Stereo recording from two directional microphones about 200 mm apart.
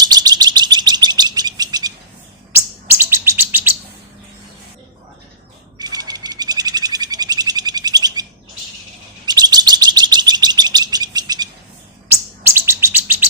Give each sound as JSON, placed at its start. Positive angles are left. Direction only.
{"t": 0.0, "sound": "bird", "side_deg": -20}
{"t": 2.5, "sound": "chirp", "side_deg": -10}
{"t": 5.8, "sound": "bird", "side_deg": -20}
{"t": 9.2, "sound": "chirp", "side_deg": -20}